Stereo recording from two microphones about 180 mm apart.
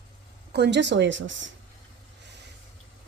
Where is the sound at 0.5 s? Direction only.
70° right (ahead or behind); by 1.5 s 90° right.